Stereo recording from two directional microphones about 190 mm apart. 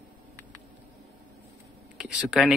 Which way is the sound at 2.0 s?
Centre (ahead or behind).